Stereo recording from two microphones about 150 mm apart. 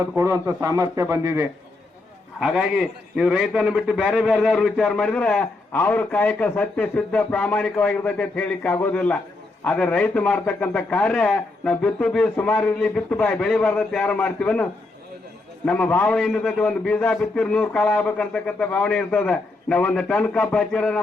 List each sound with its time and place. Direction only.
0.2 s a man's voice: 20° right (ahead or behind)
2.4 s a man's voice: centre (ahead or behind)